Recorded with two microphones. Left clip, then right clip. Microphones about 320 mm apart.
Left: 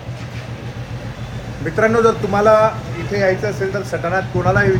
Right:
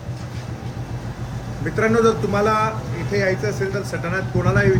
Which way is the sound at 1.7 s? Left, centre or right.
Centre.